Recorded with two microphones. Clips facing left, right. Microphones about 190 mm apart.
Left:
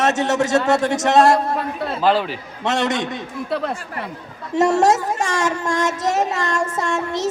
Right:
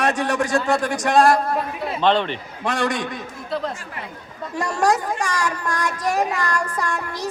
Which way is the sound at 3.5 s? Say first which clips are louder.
Left 2 dB; 65° left (ahead or behind).